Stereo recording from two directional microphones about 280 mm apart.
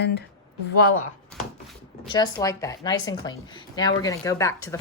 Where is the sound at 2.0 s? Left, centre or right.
Centre.